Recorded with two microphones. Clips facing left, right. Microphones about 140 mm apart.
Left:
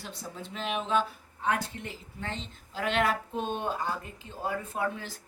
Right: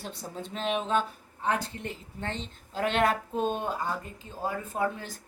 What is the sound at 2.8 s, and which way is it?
Speech, 45° right (ahead or behind).